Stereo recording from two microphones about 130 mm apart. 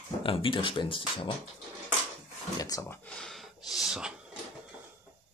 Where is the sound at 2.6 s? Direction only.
25° left (ahead or behind).